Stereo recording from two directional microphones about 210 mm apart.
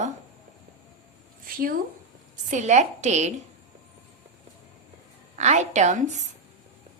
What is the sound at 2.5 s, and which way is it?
Speech, 35° right (ahead or behind).